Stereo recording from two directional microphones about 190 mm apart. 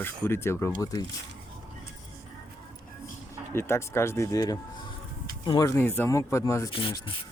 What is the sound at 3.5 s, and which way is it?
Speech, 15° left (ahead or behind).